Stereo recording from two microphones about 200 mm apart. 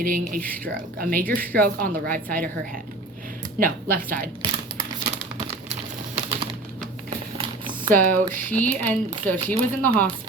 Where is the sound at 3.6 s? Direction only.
45° right (ahead or behind).